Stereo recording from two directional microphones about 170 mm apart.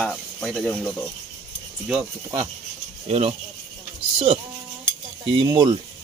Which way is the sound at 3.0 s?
40° right (ahead or behind).